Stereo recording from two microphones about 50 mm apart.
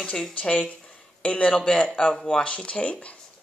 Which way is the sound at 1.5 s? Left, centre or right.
Centre.